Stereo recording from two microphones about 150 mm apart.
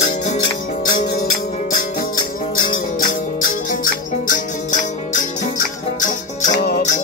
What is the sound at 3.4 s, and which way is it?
Music, 65° left (ahead or behind).